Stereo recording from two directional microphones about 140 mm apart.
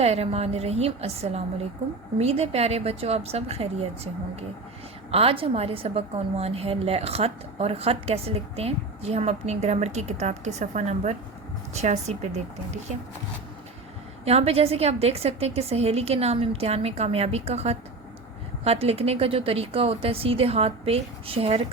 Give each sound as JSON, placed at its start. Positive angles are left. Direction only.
{"t": 0.0, "sound": "a woman's voice", "side_deg": -50}
{"t": 14.3, "sound": "a woman's voice", "side_deg": -45}